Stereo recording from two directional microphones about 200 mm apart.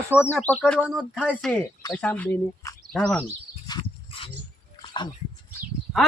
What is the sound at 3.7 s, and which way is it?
Dog, 25° left (ahead or behind).